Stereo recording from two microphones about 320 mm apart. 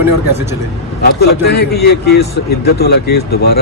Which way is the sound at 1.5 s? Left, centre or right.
Left.